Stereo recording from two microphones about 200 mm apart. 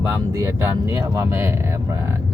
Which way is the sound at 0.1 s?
15° right (ahead or behind).